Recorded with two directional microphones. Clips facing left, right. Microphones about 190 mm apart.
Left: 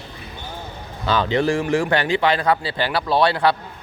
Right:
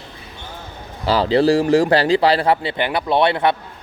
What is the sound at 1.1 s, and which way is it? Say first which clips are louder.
A man's voice: right 5 dB; 35° right (ahead or behind).